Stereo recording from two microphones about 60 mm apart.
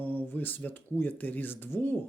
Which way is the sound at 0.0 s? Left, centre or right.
Left.